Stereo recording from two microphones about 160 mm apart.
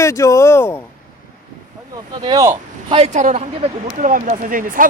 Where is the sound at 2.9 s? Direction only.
35° right (ahead or behind).